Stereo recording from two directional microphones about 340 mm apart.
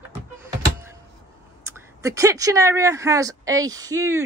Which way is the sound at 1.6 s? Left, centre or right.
Centre.